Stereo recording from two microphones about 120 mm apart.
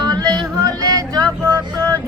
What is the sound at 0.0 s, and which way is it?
Yodeling, 35° right (ahead or behind).